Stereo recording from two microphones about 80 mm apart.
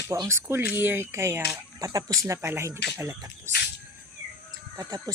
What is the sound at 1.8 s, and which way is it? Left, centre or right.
Speech, right.